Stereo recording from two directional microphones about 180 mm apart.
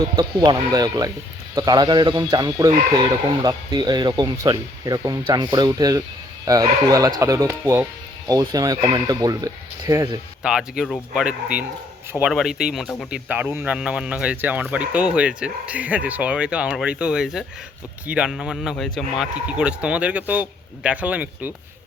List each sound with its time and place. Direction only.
0.2 s speech: 25° right (ahead or behind)
10.4 s speech: 5° right (ahead or behind)